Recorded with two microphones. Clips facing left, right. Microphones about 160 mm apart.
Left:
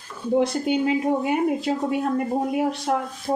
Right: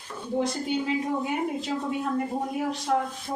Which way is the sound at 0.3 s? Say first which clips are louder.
Left 6 dB; 65° left (ahead or behind).